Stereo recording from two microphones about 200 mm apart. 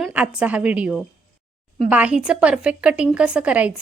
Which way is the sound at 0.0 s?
5° right (ahead or behind).